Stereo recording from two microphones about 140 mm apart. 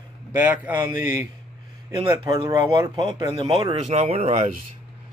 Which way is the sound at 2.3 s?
40° right (ahead or behind).